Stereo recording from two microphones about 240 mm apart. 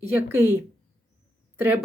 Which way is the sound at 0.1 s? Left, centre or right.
Centre.